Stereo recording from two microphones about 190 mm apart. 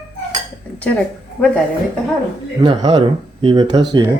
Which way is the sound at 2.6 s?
25° right (ahead or behind).